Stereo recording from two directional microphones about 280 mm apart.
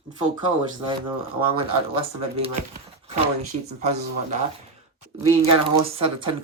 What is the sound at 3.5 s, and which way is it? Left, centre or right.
Speech, right.